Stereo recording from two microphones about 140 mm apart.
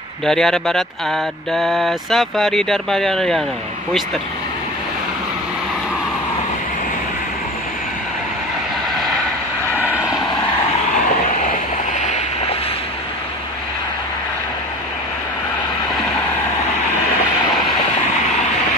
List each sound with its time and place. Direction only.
0.2 s speech: 5° left (ahead or behind)
9.8 s vehicle: 10° right (ahead or behind)
11.1 s a sound: 65° left (ahead or behind)